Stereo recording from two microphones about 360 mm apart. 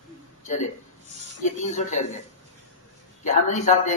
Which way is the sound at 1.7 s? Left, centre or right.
Centre.